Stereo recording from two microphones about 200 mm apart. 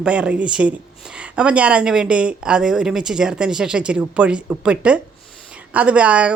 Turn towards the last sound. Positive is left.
turn(degrees=-5)  # may be behind; listen again after turning